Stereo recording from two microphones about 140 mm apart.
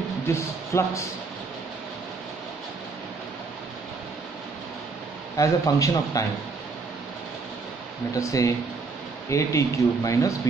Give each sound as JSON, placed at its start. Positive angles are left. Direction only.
{"t": 0.3, "sound": "speech", "side_deg": 20}
{"t": 5.4, "sound": "speech", "side_deg": 25}
{"t": 8.1, "sound": "speech", "side_deg": 25}